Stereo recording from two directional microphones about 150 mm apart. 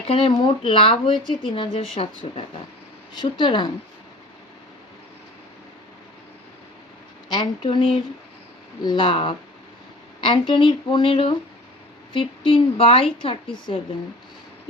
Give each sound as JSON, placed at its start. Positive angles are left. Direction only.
{"t": 0.1, "sound": "a woman's voice", "side_deg": 40}
{"t": 7.3, "sound": "a woman's voice", "side_deg": 30}